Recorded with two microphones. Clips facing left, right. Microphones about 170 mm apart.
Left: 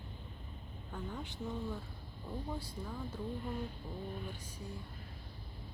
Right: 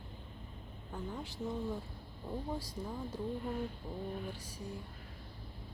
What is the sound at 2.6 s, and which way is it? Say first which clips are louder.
Speech: right 2 dB; 90° right.